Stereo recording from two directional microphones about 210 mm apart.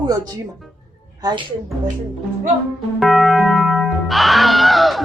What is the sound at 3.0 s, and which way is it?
Music, centre (ahead or behind).